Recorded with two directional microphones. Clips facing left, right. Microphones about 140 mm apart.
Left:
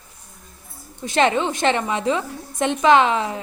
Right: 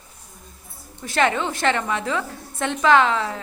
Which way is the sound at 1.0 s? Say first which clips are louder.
Left 3 dB; 20° left (ahead or behind).